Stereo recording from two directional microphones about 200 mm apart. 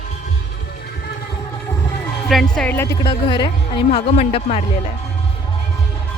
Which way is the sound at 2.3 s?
5° left (ahead or behind).